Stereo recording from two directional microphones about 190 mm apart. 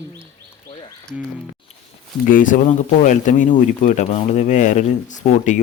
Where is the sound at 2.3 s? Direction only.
45° left (ahead or behind).